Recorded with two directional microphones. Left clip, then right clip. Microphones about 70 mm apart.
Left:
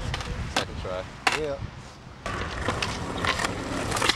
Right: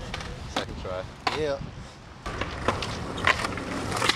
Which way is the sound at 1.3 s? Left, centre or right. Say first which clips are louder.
Left 4 dB; left.